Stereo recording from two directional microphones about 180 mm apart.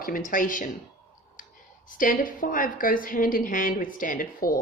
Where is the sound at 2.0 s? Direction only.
50° left (ahead or behind).